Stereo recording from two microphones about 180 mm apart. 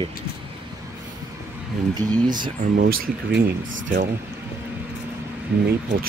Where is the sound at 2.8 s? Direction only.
60° right (ahead or behind).